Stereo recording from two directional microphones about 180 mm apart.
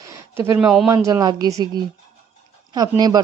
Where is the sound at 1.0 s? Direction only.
20° right (ahead or behind).